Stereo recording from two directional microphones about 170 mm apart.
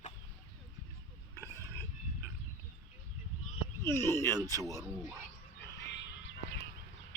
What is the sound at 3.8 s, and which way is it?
Speech, 15° left (ahead or behind).